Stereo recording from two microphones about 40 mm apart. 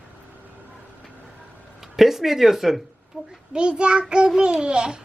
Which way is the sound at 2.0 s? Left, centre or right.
Centre.